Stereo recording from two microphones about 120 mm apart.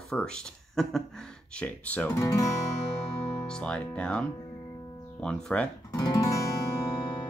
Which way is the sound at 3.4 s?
10° left (ahead or behind).